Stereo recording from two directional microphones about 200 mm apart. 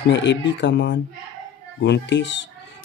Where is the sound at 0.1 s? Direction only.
65° left (ahead or behind).